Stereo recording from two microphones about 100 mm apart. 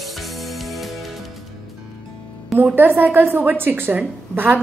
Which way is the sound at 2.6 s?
20° right (ahead or behind).